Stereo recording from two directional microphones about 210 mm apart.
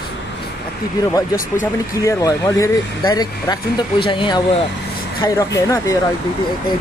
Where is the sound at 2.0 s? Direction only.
15° left (ahead or behind).